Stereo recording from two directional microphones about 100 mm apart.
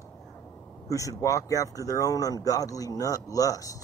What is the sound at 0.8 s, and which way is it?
Speech, 35° left (ahead or behind).